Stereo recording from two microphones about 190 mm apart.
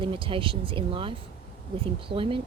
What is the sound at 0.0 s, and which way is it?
Speech, 25° right (ahead or behind).